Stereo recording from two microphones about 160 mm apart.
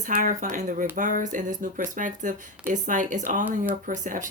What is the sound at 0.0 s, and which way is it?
Speech, 55° right (ahead or behind).